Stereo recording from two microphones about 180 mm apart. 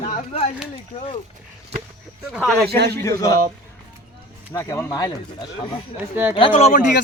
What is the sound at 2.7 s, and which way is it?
Speech, 65° right (ahead or behind).